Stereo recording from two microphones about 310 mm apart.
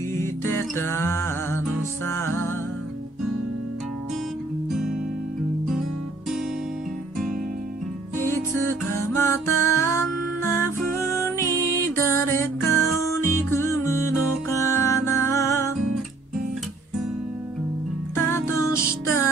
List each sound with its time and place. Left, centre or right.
0.1 s music: centre
8.3 s music: centre
18.1 s music: centre